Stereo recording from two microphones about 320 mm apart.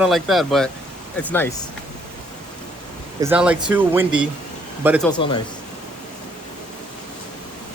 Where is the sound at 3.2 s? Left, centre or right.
Centre.